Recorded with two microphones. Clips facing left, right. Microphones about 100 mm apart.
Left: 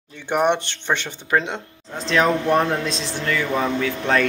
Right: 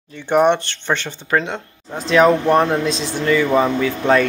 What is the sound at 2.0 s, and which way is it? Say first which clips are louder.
Speech: right 5 dB; centre (ahead or behind).